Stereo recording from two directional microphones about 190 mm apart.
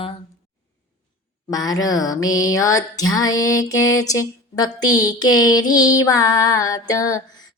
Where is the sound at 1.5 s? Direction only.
20° left (ahead or behind).